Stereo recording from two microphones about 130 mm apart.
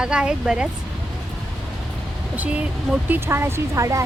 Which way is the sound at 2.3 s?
10° right (ahead or behind).